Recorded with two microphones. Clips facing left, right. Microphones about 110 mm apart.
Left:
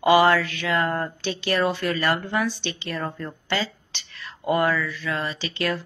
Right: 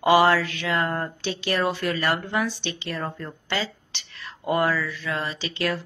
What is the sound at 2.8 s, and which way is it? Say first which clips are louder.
Speech: left 2 dB; centre (ahead or behind).